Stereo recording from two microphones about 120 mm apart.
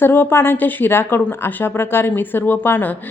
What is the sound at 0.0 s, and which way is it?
Speech, 20° left (ahead or behind).